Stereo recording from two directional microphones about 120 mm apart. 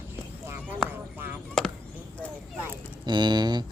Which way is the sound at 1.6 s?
5° left (ahead or behind).